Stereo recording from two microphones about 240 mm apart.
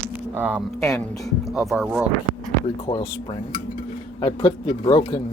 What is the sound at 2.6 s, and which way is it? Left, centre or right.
Speech, left.